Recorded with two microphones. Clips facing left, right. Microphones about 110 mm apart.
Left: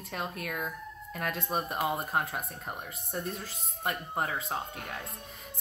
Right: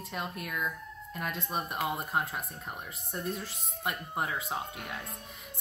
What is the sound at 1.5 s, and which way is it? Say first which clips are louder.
Speech: left 3 dB; centre (ahead or behind).